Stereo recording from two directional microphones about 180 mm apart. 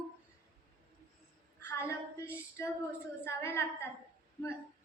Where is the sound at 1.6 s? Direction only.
15° left (ahead or behind).